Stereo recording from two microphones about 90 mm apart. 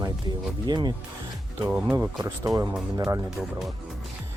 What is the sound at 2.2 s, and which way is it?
Speech, 45° right (ahead or behind).